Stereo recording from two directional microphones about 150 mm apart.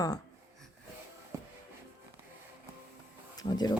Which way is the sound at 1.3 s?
20° right (ahead or behind).